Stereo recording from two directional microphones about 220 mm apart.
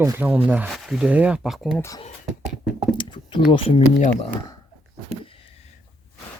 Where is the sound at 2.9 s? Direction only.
20° left (ahead or behind).